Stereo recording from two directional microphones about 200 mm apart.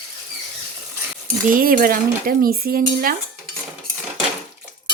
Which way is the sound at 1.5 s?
45° right (ahead or behind).